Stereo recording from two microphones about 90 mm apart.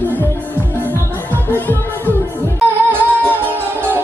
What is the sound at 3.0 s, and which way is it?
Music, 25° right (ahead or behind).